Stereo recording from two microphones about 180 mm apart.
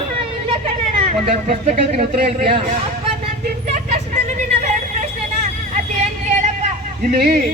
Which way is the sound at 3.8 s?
40° right (ahead or behind).